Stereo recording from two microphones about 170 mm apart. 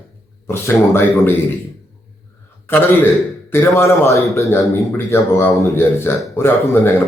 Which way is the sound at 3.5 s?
15° left (ahead or behind).